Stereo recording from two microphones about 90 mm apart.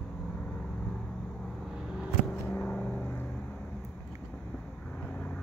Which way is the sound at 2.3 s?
15° left (ahead or behind).